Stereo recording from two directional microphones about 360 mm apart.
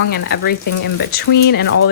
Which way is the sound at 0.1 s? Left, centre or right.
Left.